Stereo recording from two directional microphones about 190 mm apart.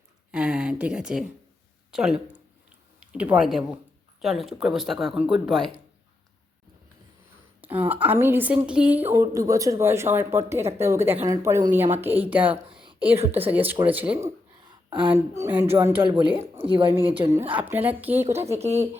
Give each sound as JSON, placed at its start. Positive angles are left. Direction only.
{"t": 0.3, "sound": "a sound", "side_deg": -5}
{"t": 1.9, "sound": "speech", "side_deg": -5}
{"t": 7.6, "sound": "a woman's voice", "side_deg": -10}
{"t": 16.0, "sound": "speech", "side_deg": -25}
{"t": 17.2, "sound": "a woman's voice", "side_deg": -15}
{"t": 18.6, "sound": "speech", "side_deg": -35}